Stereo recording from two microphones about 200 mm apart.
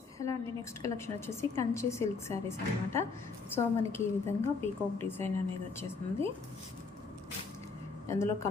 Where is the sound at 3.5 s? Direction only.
10° left (ahead or behind).